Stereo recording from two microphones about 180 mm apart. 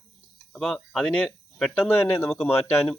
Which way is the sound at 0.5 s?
Centre (ahead or behind).